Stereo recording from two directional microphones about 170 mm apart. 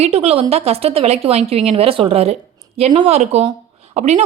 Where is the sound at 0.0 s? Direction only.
35° right (ahead or behind).